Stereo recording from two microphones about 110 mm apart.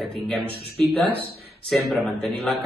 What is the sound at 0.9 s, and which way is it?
Speech, 15° left (ahead or behind).